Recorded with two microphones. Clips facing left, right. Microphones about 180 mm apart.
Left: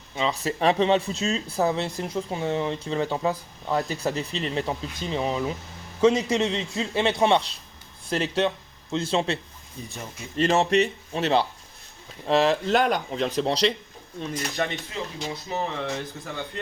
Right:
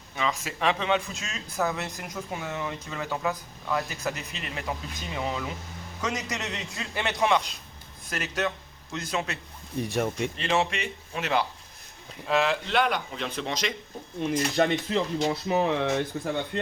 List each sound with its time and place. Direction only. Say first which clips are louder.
0.2 s a man's voice: left 4 dB; 35° left (ahead or behind)
9.7 s speech: right 11 dB; 75° right (ahead or behind)
10.3 s speech: left 12 dB; 40° left (ahead or behind)
14.8 s speech: right 7 dB; 65° right (ahead or behind)